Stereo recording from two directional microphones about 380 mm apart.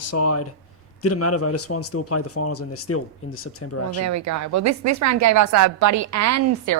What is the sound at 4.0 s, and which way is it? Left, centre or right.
A woman's voice, right.